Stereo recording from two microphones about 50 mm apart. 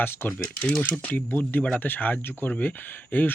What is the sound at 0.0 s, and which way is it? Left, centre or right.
Speech, left.